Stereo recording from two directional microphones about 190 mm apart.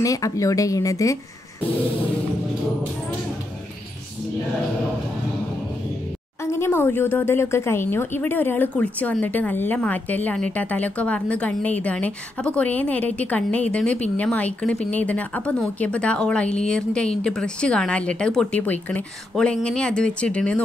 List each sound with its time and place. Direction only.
0.0 s speech: 15° left (ahead or behind)
6.4 s speech: 15° left (ahead or behind)